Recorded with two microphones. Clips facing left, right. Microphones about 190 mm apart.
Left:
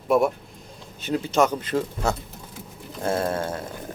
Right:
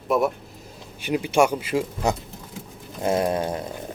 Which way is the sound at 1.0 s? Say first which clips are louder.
Right 1 dB; 15° right (ahead or behind).